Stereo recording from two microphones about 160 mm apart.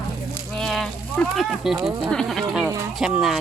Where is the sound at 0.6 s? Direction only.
5° left (ahead or behind).